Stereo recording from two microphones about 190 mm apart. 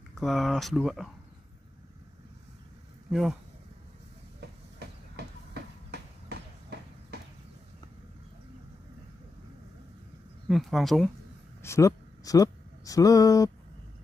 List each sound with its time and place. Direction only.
0.1 s speech: centre (ahead or behind)
3.1 s speech: centre (ahead or behind)
4.4 s train: 60° right (ahead or behind)
10.5 s speech: centre (ahead or behind)
11.6 s speech: 15° left (ahead or behind)